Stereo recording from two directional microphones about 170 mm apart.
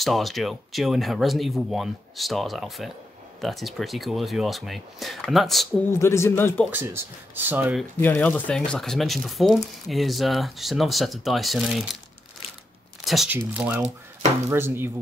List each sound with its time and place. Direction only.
0.0 s speech: centre (ahead or behind)
5.9 s speech: 15° left (ahead or behind)
6.7 s speech: 15° right (ahead or behind)
8.0 s speech: 10° left (ahead or behind)
13.0 s a sound: centre (ahead or behind)
13.3 s speech: 10° right (ahead or behind)